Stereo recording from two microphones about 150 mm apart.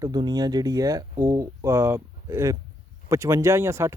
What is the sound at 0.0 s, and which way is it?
Speech, 30° right (ahead or behind).